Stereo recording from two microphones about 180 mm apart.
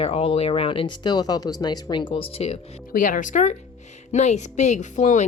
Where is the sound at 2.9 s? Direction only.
50° left (ahead or behind).